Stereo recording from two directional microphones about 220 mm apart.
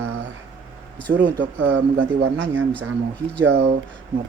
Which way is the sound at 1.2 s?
55° right (ahead or behind).